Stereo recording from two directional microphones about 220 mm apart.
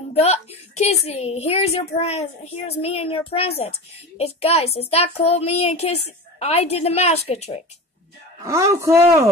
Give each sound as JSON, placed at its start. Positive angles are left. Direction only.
{"t": 0.1, "sound": "a woman's voice", "side_deg": 30}
{"t": 8.5, "sound": "speech", "side_deg": -15}